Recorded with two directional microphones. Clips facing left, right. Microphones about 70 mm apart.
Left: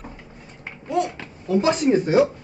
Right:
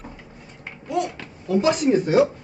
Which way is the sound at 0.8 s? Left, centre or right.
Left.